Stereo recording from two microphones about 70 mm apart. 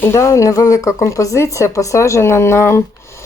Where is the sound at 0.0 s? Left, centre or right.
Left.